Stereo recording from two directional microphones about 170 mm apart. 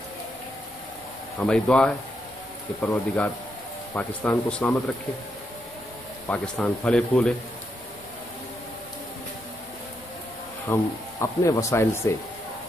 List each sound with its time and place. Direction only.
1.4 s speech: 5° left (ahead or behind)
6.2 s speech: 10° left (ahead or behind)
10.7 s speech: 20° left (ahead or behind)